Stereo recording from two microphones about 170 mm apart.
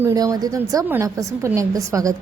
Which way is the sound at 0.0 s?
20° right (ahead or behind).